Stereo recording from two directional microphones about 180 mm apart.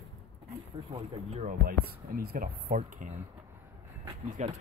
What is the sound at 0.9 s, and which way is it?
Speech, 40° right (ahead or behind).